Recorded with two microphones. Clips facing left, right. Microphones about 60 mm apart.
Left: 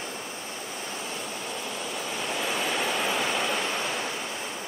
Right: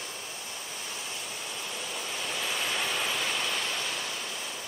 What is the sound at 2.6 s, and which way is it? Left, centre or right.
Waterfall, centre.